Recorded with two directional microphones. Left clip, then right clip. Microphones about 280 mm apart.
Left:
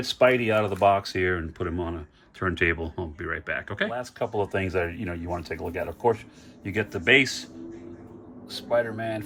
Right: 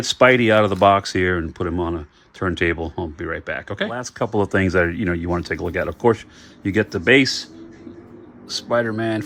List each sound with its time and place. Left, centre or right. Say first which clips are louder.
0.1 s speech: right 7 dB; right
4.4 s speech: right 9 dB; right
8.4 s speech: right 5 dB; right